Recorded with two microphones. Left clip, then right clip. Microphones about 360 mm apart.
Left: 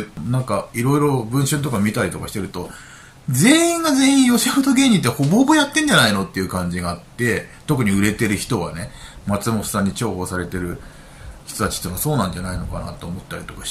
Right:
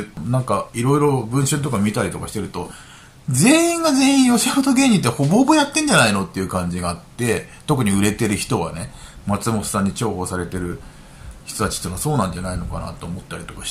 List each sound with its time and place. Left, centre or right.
0.3 s speech: centre